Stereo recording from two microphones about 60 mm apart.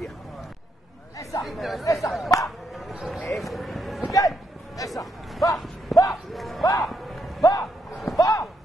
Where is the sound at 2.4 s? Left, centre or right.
Centre.